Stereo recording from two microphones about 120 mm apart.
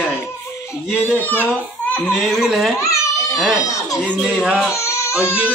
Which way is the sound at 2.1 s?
Centre (ahead or behind).